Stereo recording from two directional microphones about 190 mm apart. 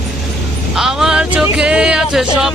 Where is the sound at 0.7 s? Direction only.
5° right (ahead or behind).